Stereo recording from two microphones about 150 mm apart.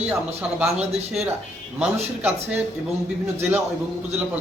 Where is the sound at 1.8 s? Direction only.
10° right (ahead or behind).